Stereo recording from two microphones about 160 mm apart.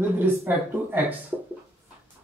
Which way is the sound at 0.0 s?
15° right (ahead or behind).